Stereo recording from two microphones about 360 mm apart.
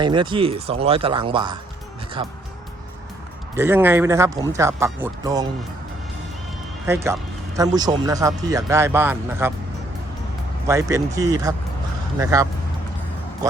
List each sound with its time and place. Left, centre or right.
0.0 s speech: centre
3.6 s speech: centre
6.8 s speech: centre
10.7 s speech: centre